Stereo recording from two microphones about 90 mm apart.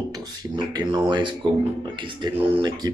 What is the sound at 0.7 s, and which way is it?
Speech, 55° right (ahead or behind).